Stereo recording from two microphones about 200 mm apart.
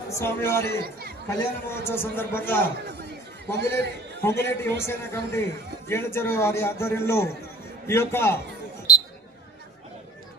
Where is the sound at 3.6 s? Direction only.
55° right (ahead or behind).